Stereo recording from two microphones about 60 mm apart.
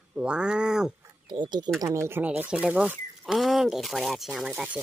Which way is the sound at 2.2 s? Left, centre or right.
Right.